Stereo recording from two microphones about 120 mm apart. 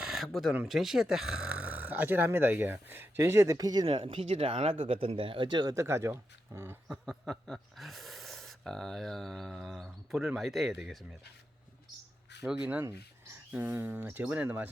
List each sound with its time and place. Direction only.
0.0 s a sound: centre (ahead or behind)
0.7 s speech: 5° right (ahead or behind); by 3.8 s 30° right (ahead or behind)
3.8 s speech: 50° right (ahead or behind); by 6.7 s 20° right (ahead or behind)
7.0 s speech: 5° left (ahead or behind)
12.5 s speech: 10° right (ahead or behind)